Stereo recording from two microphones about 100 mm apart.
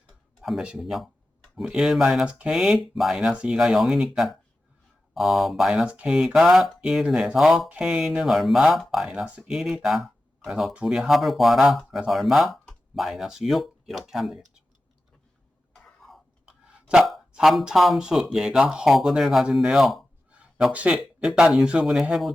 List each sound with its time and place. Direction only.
0.4 s speech: 5° right (ahead or behind)
15.7 s a sound: 5° left (ahead or behind)
16.9 s speech: 5° right (ahead or behind)